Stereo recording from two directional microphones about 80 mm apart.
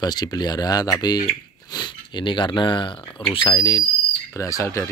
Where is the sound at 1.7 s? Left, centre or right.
Left.